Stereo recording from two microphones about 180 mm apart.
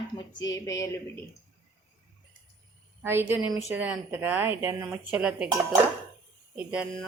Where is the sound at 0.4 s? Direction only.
20° left (ahead or behind).